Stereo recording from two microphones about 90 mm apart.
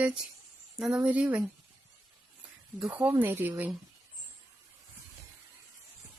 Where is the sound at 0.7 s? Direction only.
5° right (ahead or behind).